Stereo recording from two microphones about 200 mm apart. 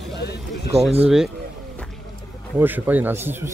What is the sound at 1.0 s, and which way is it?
Speech, 5° right (ahead or behind).